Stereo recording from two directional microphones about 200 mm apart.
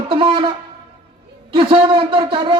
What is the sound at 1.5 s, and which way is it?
A man's voice, 25° right (ahead or behind).